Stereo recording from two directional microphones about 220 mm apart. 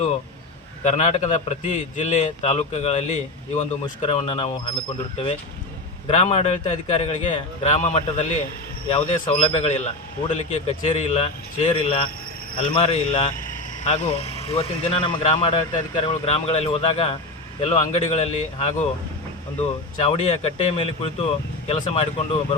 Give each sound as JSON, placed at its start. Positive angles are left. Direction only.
{"t": 0.9, "sound": "a man's voice", "side_deg": 30}
{"t": 6.1, "sound": "speech", "side_deg": 30}